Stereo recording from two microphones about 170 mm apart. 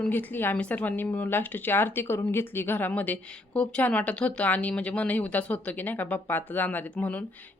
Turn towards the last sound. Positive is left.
turn(degrees=10)  # may be behind; listen again after turning